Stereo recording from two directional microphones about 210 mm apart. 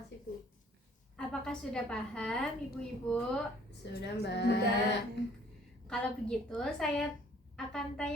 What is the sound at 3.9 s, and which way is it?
Speech, 55° left (ahead or behind).